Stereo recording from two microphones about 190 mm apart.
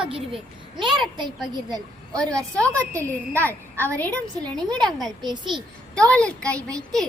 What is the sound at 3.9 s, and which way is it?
A woman's voice, 10° left (ahead or behind).